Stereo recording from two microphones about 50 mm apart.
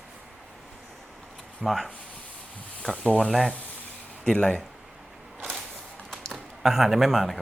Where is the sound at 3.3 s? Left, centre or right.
Centre.